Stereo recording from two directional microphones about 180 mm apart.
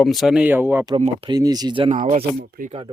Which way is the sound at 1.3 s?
20° right (ahead or behind).